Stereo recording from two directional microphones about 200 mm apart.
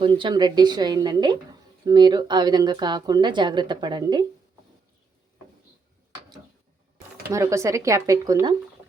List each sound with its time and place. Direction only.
0.0 s speech: 25° right (ahead or behind)
7.3 s speech: 15° right (ahead or behind)